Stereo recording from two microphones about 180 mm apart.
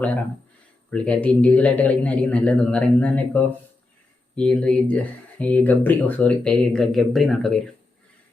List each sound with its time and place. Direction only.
0.9 s a man's voice: 5° left (ahead or behind)